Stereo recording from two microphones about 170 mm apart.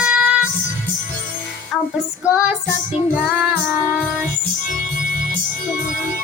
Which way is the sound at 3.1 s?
5° right (ahead or behind).